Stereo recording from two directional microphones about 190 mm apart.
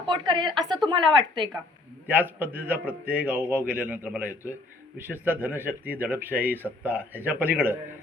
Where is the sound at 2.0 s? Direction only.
10° right (ahead or behind).